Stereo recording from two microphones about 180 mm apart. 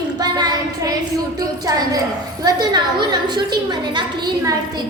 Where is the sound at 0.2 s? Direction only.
20° right (ahead or behind).